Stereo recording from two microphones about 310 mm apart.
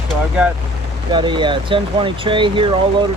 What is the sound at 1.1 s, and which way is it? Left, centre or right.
Speech, centre.